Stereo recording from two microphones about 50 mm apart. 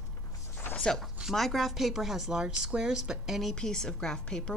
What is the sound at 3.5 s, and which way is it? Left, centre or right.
Speech, centre.